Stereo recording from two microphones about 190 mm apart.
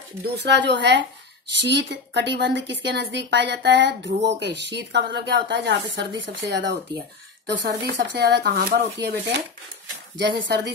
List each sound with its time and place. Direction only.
0.2 s a woman's voice: 65° right (ahead or behind)